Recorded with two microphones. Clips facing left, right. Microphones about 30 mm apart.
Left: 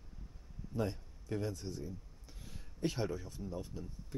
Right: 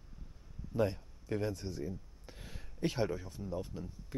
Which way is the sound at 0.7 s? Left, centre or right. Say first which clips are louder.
Right 5 dB; centre.